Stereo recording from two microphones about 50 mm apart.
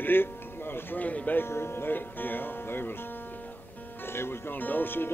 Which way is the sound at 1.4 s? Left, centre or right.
Left.